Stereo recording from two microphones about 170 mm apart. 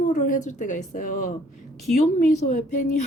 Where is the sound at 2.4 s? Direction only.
45° left (ahead or behind).